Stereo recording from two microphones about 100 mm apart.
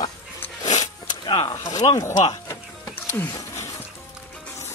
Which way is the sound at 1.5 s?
30° left (ahead or behind).